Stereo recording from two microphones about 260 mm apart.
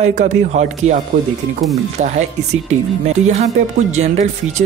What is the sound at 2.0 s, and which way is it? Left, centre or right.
Speech, right.